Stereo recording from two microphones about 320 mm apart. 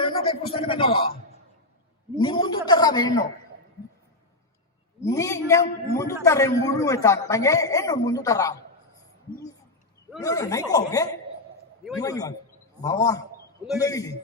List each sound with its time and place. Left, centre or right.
0.0 s speech: centre
2.1 s speech: centre
5.0 s speech: centre
10.2 s speech: centre